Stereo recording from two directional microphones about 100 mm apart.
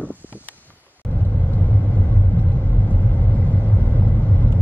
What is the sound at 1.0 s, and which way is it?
Vehicle, centre (ahead or behind).